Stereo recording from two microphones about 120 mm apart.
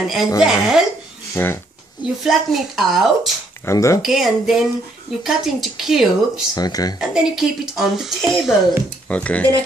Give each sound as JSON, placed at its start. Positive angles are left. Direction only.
{"t": 0.0, "sound": "speech", "side_deg": -5}
{"t": 1.3, "sound": "speech", "side_deg": 20}
{"t": 2.2, "sound": "speech", "side_deg": 0}
{"t": 3.6, "sound": "speech", "side_deg": 25}
{"t": 4.0, "sound": "speech", "side_deg": -5}
{"t": 6.5, "sound": "speech", "side_deg": 30}
{"t": 7.0, "sound": "speech", "side_deg": -5}
{"t": 9.1, "sound": "speech", "side_deg": 10}